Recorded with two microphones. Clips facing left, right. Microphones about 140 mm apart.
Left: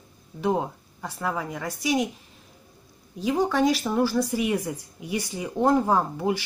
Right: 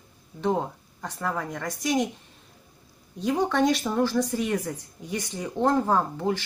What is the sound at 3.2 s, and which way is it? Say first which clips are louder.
Speech: left 1 dB; 5° left (ahead or behind).